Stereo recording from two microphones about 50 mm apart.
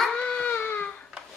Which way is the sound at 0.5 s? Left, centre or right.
Left.